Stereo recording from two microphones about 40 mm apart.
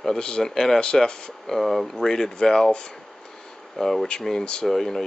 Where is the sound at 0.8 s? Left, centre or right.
Left.